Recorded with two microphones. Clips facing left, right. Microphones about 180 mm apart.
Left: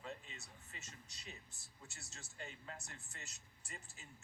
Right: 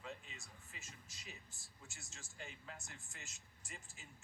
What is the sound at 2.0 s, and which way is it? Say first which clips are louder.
Speech: left 2 dB; centre (ahead or behind).